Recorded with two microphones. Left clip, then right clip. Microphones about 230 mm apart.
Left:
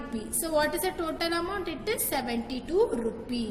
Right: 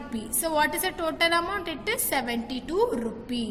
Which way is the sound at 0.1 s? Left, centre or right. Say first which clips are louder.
Right 1 dB; right.